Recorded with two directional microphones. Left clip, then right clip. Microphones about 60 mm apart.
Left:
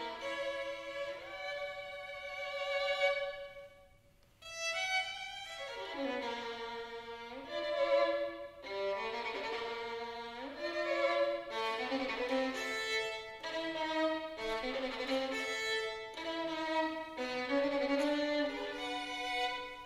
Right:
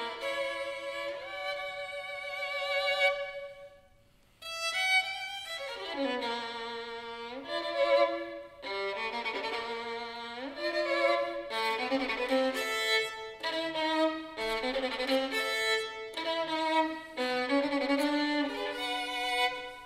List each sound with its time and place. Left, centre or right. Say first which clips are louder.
0.0 s music: right 5 dB; right
4.6 s violin: right 7 dB; right
7.5 s violin: right 5 dB; right